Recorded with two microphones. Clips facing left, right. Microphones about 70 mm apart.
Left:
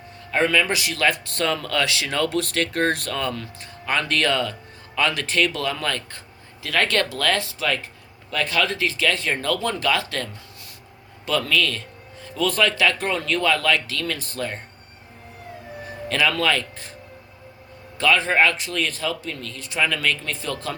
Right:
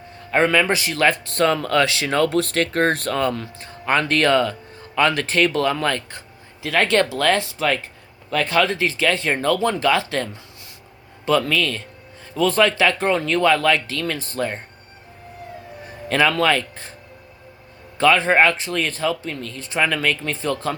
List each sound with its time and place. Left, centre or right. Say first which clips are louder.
0.3 s speech: right 3 dB; right
6.1 s speech: right 3 dB; right
11.3 s speech: right 3 dB; right
16.0 s speech: right 4 dB; right
17.9 s speech: right 4 dB; right